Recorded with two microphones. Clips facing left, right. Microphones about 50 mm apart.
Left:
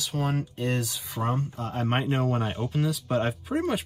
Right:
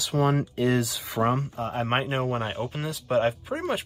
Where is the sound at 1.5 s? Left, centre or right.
Right.